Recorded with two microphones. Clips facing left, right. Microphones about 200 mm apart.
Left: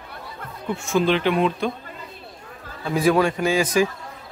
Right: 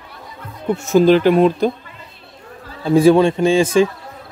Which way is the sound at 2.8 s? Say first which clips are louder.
Right 8 dB; 30° right (ahead or behind).